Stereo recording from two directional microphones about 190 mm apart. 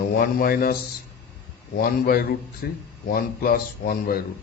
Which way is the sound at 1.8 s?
50° left (ahead or behind).